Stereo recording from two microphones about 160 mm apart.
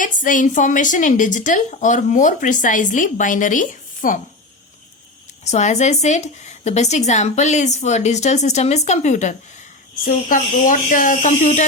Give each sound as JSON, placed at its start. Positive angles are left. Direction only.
{"t": 0.0, "sound": "a woman's voice", "side_deg": 55}
{"t": 5.5, "sound": "a woman's voice", "side_deg": 45}
{"t": 10.0, "sound": "speech", "side_deg": 60}